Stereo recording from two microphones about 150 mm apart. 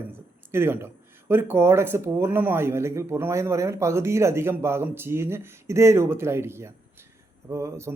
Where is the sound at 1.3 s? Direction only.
15° right (ahead or behind).